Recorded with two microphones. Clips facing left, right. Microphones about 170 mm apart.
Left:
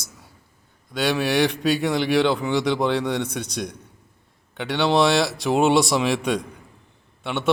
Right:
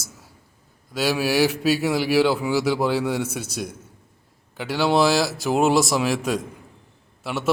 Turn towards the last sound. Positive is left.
turn(degrees=0)  # may be behind; listen again after turning